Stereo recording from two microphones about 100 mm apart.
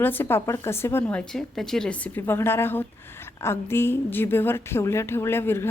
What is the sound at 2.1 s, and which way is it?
A woman's voice, 20° left (ahead or behind).